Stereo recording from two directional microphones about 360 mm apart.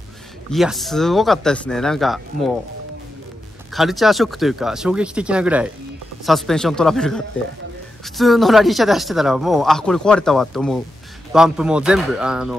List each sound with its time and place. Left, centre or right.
0.5 s speech: centre
3.7 s speech: centre